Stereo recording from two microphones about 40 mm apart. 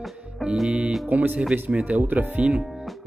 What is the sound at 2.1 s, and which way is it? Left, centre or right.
Speech, right.